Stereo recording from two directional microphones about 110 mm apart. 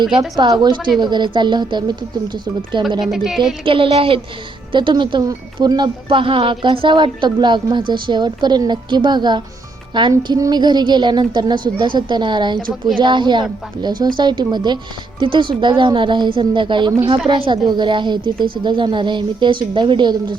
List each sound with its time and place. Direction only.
0.0 s a woman's voice: 45° right (ahead or behind)
3.0 s speech: centre (ahead or behind)
3.6 s a woman's voice: 55° right (ahead or behind)